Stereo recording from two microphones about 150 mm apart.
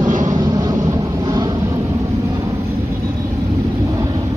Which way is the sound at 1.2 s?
25° right (ahead or behind).